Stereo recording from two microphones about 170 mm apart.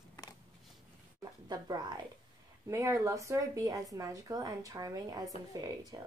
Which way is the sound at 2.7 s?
20° right (ahead or behind).